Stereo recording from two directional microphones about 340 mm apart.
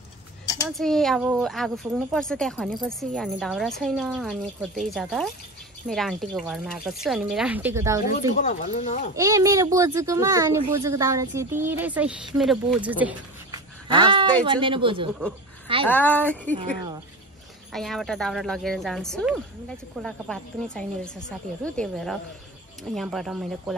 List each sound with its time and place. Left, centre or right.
0.7 s speech: centre
8.4 s speech: left
9.1 s a child's voice: centre
15.9 s speech: centre
17.7 s speech: centre